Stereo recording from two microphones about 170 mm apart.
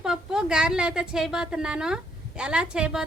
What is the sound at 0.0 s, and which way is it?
A woman's voice, 5° right (ahead or behind).